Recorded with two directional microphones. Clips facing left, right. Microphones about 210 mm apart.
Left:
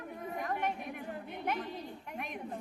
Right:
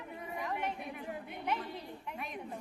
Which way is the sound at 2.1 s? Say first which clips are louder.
Left 1 dB; 50° left (ahead or behind).